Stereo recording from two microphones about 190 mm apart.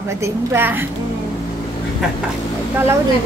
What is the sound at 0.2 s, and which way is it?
Speech, 15° right (ahead or behind).